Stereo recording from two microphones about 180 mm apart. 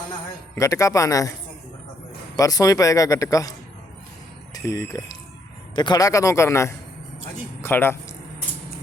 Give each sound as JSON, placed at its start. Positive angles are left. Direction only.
{"t": 0.5, "sound": "a man's voice", "side_deg": 15}
{"t": 2.3, "sound": "speech", "side_deg": 20}
{"t": 4.5, "sound": "a man's voice", "side_deg": 20}